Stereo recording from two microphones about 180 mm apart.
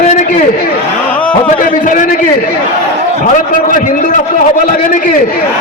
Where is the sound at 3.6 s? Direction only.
50° left (ahead or behind).